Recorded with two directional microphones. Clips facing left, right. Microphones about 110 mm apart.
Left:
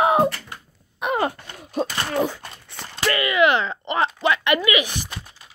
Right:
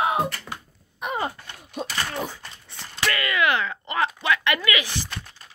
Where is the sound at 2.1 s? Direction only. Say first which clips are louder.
Left 8 dB; 85° left.